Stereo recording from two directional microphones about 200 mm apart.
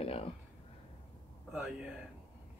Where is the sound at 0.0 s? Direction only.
30° left (ahead or behind).